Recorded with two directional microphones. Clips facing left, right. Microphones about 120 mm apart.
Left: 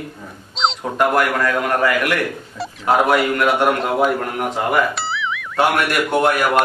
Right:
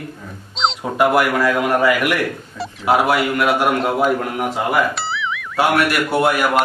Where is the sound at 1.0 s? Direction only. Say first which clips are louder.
Right 2 dB; 10° right (ahead or behind).